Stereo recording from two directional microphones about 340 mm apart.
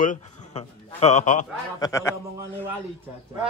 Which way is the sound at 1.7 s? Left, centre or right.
Centre.